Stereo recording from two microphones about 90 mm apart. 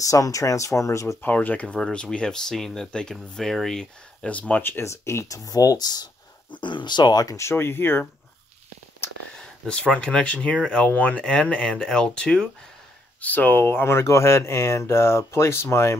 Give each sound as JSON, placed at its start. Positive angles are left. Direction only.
{"t": 0.0, "sound": "speech", "side_deg": 40}
{"t": 1.2, "sound": "speech", "side_deg": 20}
{"t": 6.5, "sound": "speech", "side_deg": 60}
{"t": 7.3, "sound": "speech", "side_deg": 30}
{"t": 9.4, "sound": "speech", "side_deg": 10}